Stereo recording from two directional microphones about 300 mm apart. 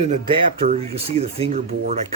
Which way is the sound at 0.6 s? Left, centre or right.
Right.